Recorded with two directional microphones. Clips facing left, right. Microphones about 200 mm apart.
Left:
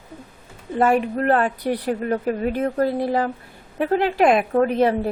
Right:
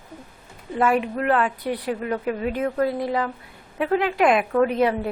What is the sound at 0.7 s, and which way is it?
A woman's voice, 40° left (ahead or behind).